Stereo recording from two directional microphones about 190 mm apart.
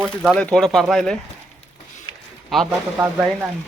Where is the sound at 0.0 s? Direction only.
5° right (ahead or behind).